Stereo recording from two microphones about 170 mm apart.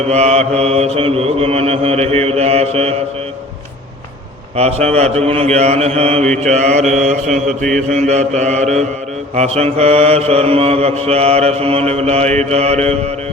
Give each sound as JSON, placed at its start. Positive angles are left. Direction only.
{"t": 0.1, "sound": "mantra", "side_deg": -40}
{"t": 4.5, "sound": "mantra", "side_deg": -40}